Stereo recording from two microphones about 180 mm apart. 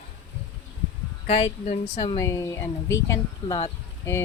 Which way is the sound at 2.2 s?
15° left (ahead or behind).